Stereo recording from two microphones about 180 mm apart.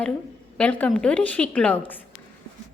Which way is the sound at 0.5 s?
5° left (ahead or behind).